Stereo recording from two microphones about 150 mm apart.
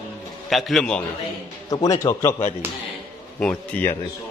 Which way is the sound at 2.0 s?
20° left (ahead or behind).